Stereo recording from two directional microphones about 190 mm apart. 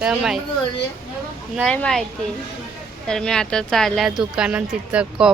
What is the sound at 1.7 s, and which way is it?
Speech, 5° left (ahead or behind).